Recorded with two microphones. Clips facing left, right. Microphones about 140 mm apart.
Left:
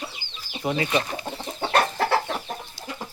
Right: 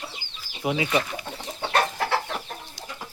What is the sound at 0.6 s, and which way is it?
Speech, 10° right (ahead or behind).